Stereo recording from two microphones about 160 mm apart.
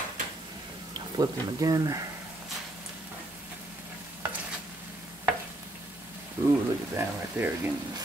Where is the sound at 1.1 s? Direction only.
25° right (ahead or behind).